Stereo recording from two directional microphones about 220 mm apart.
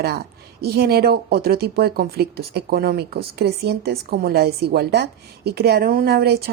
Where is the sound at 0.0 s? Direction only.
45° right (ahead or behind).